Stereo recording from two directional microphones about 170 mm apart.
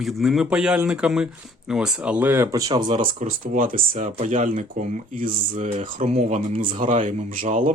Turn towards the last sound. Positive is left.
turn(degrees=-50)  # may be behind; listen again after turning